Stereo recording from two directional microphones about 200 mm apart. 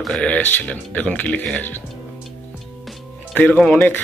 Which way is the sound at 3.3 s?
5° left (ahead or behind).